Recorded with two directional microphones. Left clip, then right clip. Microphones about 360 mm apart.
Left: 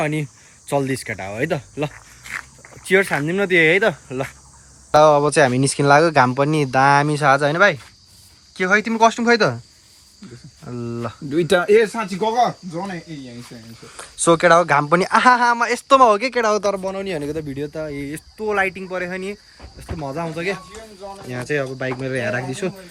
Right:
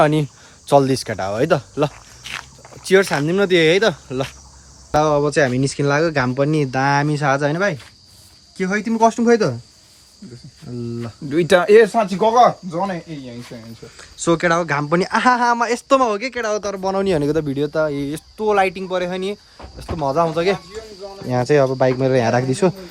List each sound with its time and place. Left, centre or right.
0.0 s speech: centre
10.7 s speech: centre
11.7 s speech: right
13.8 s speech: centre
16.8 s speech: centre